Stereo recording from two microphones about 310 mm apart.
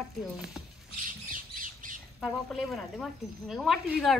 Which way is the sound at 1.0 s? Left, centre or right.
Right.